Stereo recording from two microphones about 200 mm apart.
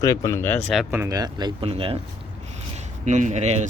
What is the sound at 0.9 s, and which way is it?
Speech, 15° right (ahead or behind).